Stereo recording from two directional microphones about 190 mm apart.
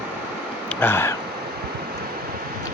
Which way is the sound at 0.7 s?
10° left (ahead or behind).